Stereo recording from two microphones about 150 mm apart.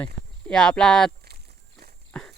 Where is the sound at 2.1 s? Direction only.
5° left (ahead or behind).